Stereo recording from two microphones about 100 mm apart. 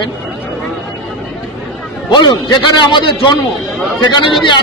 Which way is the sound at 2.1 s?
45° left (ahead or behind).